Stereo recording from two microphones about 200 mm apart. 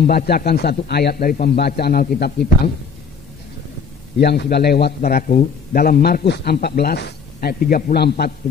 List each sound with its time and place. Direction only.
0.0 s a man's voice: 50° left (ahead or behind)
4.2 s a man's voice: 55° left (ahead or behind)